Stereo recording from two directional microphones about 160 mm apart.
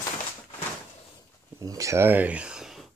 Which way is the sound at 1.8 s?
15° right (ahead or behind).